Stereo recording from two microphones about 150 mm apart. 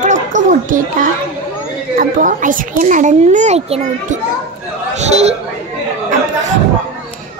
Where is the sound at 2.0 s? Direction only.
65° right (ahead or behind); by 5.3 s 45° right (ahead or behind).